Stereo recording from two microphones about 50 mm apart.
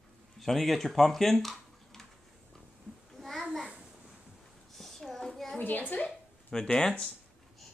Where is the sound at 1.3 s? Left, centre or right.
Centre.